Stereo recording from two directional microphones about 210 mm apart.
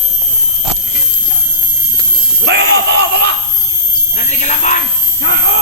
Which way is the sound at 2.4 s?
50° right (ahead or behind).